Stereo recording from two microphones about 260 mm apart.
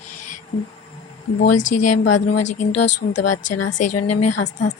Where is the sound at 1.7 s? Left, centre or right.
Left.